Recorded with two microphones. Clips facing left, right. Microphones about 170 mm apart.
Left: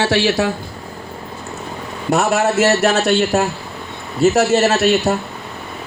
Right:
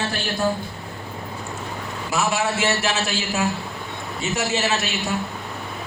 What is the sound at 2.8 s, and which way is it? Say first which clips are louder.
Speech: left 9 dB; 40° left (ahead or behind).